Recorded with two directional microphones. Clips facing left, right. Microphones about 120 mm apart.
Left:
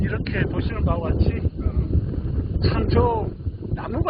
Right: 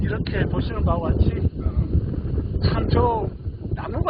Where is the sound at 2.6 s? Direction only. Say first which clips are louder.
Left 1 dB; 5° right (ahead or behind).